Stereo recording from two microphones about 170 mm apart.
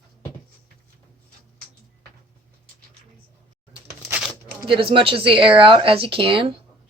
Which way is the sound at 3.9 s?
15° right (ahead or behind).